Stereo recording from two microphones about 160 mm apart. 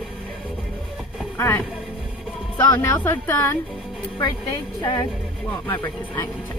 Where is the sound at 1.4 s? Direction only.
10° left (ahead or behind).